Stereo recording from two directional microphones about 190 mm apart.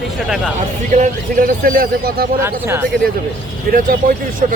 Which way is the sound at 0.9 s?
40° right (ahead or behind).